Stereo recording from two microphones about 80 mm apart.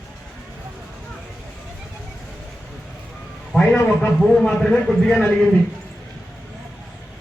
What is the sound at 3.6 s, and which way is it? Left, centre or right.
Speech, centre.